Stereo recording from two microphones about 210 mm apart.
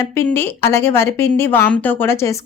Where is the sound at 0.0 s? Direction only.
10° left (ahead or behind).